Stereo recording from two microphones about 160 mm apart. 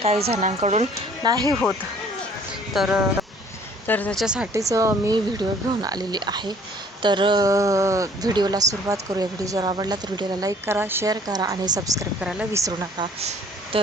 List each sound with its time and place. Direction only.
0.0 s speech: 40° right (ahead or behind)
1.2 s speech: 25° right (ahead or behind)
2.7 s speech: 5° right (ahead or behind)
3.8 s speech: 10° left (ahead or behind)
4.2 s speech: 5° right (ahead or behind)
4.5 s speech: 20° right (ahead or behind)
12.2 s speech: 5° right (ahead or behind)
12.5 s speech: 20° right (ahead or behind)
13.0 s speech: 40° right (ahead or behind)